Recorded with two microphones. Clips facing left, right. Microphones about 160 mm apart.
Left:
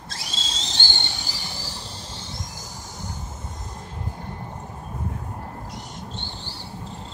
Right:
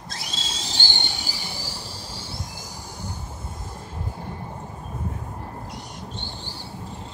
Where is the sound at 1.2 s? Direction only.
10° right (ahead or behind).